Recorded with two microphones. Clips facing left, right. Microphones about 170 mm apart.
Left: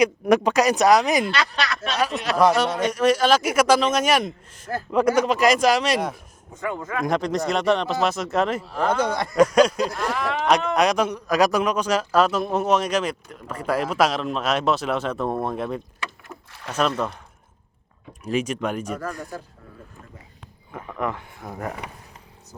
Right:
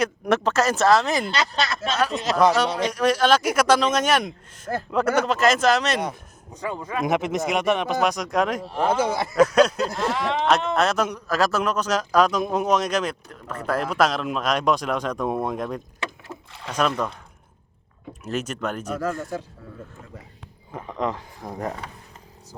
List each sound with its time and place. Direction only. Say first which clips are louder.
0.0 s speech: left 4 dB; 10° left (ahead or behind)
1.4 s speech: right 1 dB; 25° right (ahead or behind)
2.0 s speech: even; centre (ahead or behind)
6.7 s speech: right 1 dB; 15° right (ahead or behind)
8.1 s speech: even; 5° left (ahead or behind)
8.8 s speech: right 1 dB; 5° right (ahead or behind)
9.5 s speech: left 1 dB; 10° left (ahead or behind)
9.9 s speech: right 1 dB; 25° right (ahead or behind)
10.8 s speech: left 2 dB; 15° left (ahead or behind)
18.3 s speech: left 3 dB; 10° left (ahead or behind)
20.7 s speech: right 1 dB; 25° right (ahead or behind)